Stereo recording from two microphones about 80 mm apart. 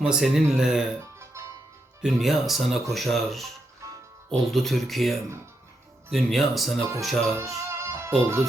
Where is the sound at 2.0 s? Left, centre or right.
Centre.